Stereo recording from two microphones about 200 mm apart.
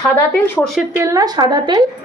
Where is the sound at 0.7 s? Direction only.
10° right (ahead or behind).